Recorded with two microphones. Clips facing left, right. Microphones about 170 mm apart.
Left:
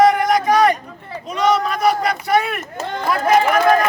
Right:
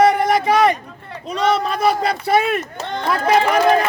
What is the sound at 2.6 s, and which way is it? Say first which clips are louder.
Speech: even; centre (ahead or behind).